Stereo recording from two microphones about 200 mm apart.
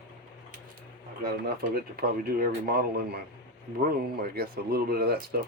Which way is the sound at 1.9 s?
50° right (ahead or behind).